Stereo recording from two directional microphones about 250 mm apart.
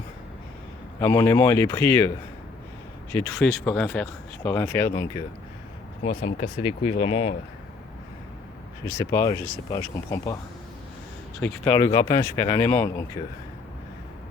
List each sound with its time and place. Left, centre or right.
0.9 s speech: centre
6.0 s speech: left
8.8 s speech: centre
11.4 s speech: centre